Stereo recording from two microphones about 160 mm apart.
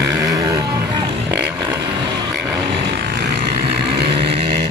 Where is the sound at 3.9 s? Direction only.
90° right.